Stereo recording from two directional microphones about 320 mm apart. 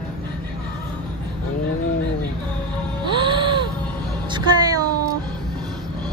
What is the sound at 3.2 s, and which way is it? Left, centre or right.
Gasp, centre.